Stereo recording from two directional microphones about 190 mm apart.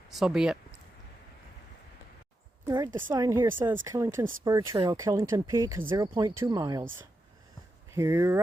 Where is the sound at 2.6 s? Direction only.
20° right (ahead or behind).